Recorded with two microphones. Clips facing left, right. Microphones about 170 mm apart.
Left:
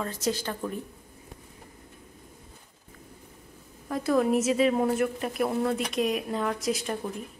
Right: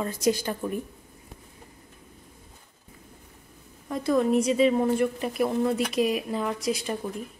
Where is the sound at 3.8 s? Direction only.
Centre (ahead or behind).